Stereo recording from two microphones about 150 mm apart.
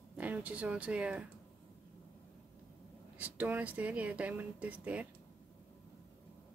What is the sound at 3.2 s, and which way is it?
Speech, 10° right (ahead or behind).